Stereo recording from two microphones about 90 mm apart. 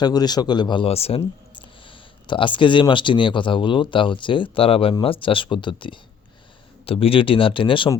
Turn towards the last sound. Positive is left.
turn(degrees=70)  # may be behind; listen again after turning